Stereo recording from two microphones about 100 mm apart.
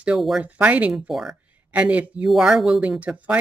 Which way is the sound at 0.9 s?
5° right (ahead or behind).